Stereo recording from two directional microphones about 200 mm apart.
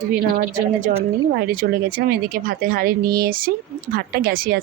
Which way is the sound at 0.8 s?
40° right (ahead or behind).